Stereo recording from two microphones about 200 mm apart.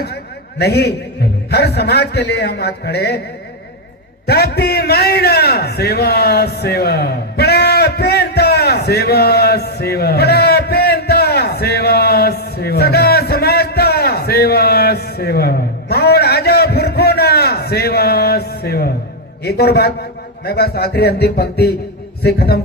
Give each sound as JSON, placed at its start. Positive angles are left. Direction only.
{"t": 0.6, "sound": "speech", "side_deg": 55}
{"t": 4.3, "sound": "a sound", "side_deg": 55}
{"t": 19.5, "sound": "a man's voice", "side_deg": 55}